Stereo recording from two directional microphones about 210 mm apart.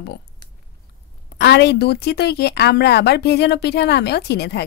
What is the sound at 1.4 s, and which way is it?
A woman's voice, 50° left (ahead or behind).